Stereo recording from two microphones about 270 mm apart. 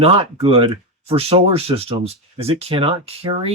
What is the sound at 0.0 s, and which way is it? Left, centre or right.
Speech, right.